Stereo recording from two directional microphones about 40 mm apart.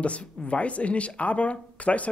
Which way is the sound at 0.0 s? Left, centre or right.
Left.